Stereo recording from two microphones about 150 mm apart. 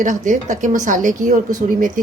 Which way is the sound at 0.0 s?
55° right (ahead or behind).